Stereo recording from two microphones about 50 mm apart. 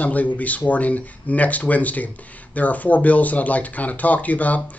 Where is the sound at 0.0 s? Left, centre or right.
Left.